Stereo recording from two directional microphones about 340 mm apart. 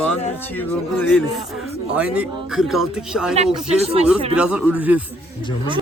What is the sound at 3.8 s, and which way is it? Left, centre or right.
Speech, centre.